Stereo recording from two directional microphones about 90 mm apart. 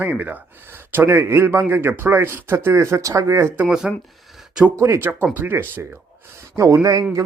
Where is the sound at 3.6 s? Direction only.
10° right (ahead or behind).